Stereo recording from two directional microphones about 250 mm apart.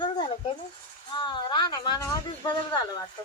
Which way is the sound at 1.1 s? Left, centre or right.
Centre.